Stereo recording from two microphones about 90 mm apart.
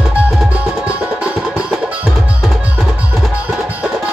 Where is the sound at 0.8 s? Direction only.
10° right (ahead or behind).